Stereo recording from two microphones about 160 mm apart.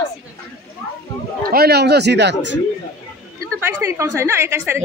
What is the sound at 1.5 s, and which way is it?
Speech, 80° right.